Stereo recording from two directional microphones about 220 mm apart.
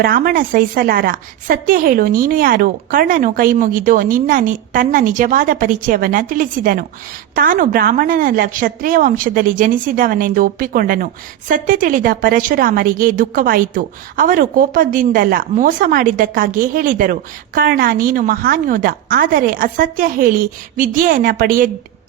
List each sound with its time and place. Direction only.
0.0 s a woman's voice: 40° right (ahead or behind)